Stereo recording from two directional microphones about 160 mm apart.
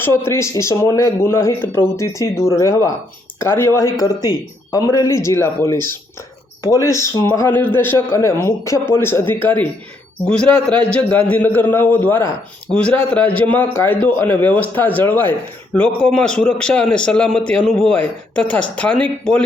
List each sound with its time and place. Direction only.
0.0 s a man's voice: 15° left (ahead or behind)
10.9 s a man's voice: 10° left (ahead or behind)